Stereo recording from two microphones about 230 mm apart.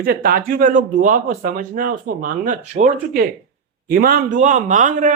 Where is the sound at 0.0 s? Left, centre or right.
Right.